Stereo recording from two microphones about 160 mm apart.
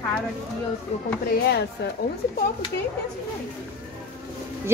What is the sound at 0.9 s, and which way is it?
Speech, 40° left (ahead or behind).